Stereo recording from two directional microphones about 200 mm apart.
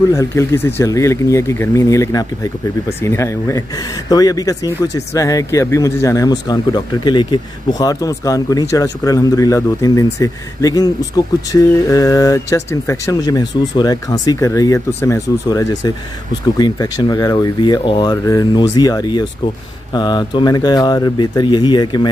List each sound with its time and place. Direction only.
0.1 s speech: 15° left (ahead or behind)